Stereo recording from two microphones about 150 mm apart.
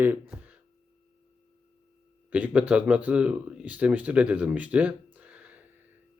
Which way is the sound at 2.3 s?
10° right (ahead or behind).